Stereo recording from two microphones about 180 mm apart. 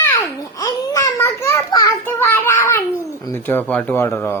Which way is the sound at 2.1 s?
10° left (ahead or behind).